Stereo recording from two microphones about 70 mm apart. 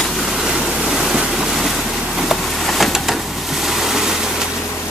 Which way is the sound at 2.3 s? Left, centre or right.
Centre.